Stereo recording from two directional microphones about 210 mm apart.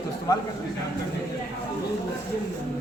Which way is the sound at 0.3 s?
15° left (ahead or behind).